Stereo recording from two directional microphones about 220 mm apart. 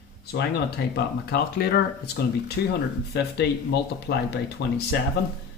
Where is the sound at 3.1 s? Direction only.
50° left (ahead or behind).